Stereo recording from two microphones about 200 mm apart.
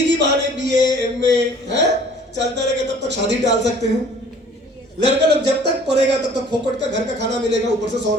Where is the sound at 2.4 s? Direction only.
60° right (ahead or behind).